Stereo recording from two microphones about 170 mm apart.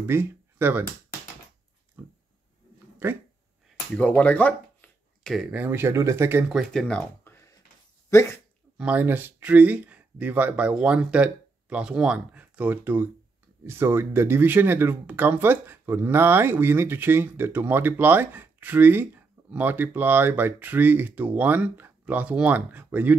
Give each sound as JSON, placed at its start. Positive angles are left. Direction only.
{"t": 0.0, "sound": "speech", "side_deg": -15}
{"t": 2.0, "sound": "dog", "side_deg": -10}
{"t": 3.0, "sound": "speech", "side_deg": -15}
{"t": 3.9, "sound": "speech", "side_deg": 10}
{"t": 6.5, "sound": "speech", "side_deg": 0}
{"t": 8.1, "sound": "speech", "side_deg": 15}
{"t": 8.7, "sound": "speech", "side_deg": -10}